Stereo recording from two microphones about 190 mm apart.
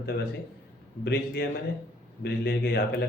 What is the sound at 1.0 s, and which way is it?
Speech, 60° left (ahead or behind).